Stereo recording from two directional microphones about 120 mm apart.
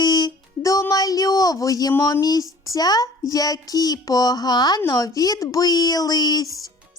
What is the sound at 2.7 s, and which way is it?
Music, 30° left (ahead or behind).